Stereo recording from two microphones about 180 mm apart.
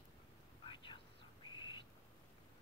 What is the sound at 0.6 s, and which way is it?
Whispering, 25° left (ahead or behind).